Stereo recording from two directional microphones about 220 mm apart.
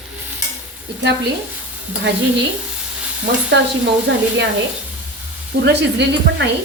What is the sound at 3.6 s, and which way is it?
Speech, 50° right (ahead or behind).